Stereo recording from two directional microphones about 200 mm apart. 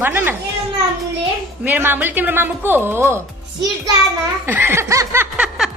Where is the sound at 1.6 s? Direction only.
10° right (ahead or behind).